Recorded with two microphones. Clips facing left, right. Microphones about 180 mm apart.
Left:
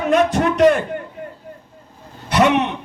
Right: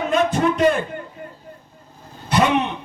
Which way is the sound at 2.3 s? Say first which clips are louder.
Left 3 dB; 70° left (ahead or behind).